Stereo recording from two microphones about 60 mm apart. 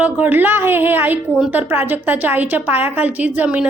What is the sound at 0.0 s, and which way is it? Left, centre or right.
A woman's voice, right.